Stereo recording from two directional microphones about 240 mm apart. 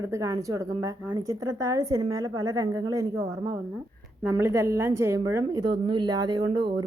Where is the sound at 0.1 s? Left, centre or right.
Centre.